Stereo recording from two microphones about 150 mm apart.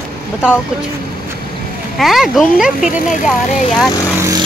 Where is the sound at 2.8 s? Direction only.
60° left (ahead or behind).